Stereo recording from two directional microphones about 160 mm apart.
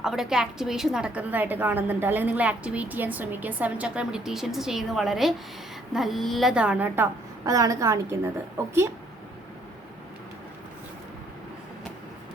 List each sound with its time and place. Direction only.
0.0 s a woman's voice: centre (ahead or behind)